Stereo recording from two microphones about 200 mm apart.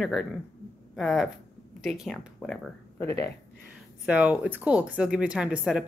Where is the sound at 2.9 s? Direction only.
15° left (ahead or behind).